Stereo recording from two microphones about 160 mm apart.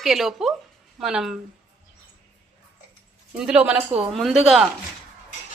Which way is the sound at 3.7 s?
35° right (ahead or behind).